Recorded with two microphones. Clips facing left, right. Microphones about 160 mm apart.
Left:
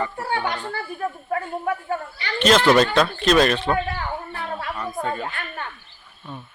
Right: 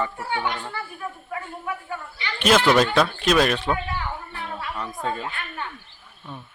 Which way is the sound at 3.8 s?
45° left (ahead or behind).